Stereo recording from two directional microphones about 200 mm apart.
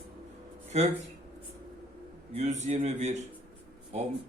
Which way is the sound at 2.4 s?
35° right (ahead or behind).